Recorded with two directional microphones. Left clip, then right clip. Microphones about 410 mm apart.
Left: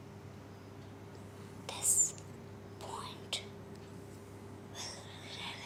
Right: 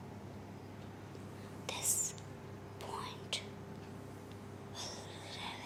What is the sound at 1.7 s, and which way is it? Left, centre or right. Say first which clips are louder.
Whispering: left 4 dB; centre.